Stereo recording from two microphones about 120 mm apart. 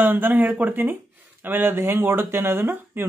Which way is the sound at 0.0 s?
15° right (ahead or behind).